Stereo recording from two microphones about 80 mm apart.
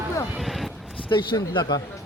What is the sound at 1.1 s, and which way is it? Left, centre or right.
Speech, left.